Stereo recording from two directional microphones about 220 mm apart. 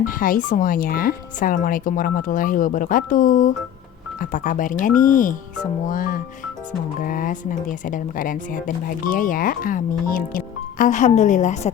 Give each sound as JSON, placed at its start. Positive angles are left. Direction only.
{"t": 0.0, "sound": "speech", "side_deg": 40}